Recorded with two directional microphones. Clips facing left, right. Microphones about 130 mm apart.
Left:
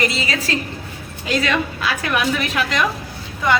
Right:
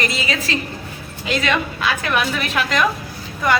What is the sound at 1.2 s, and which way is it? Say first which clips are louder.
A woman's voice: even; 20° right (ahead or behind).